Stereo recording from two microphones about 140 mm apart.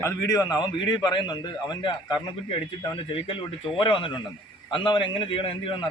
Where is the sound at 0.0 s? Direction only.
20° left (ahead or behind).